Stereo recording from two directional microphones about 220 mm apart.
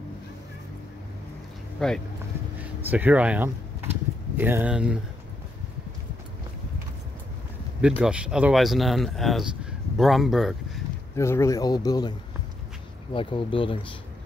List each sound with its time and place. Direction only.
1.8 s speech: centre (ahead or behind)
8.0 s speech: 5° right (ahead or behind)
11.1 s speech: 15° left (ahead or behind)
13.1 s speech: 25° left (ahead or behind)